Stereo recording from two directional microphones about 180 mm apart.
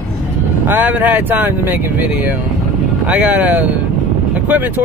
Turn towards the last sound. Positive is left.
turn(degrees=-10)  # may be behind; listen again after turning